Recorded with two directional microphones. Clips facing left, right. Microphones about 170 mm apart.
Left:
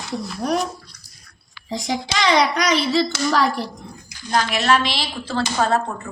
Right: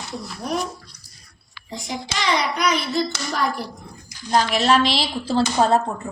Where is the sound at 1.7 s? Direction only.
90° left.